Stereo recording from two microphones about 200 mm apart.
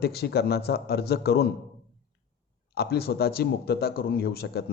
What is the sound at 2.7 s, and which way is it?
A man's voice, 50° left (ahead or behind).